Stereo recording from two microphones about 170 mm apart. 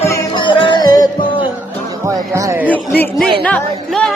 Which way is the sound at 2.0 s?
20° right (ahead or behind).